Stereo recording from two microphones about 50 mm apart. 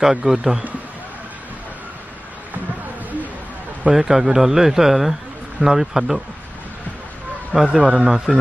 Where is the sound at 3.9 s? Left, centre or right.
Centre.